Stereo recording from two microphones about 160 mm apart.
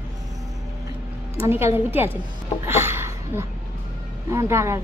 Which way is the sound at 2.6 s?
15° right (ahead or behind).